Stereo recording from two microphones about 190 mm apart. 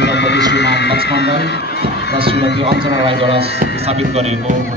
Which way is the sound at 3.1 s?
30° right (ahead or behind).